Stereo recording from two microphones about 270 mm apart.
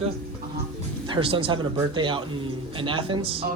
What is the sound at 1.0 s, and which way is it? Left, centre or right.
Speech, centre.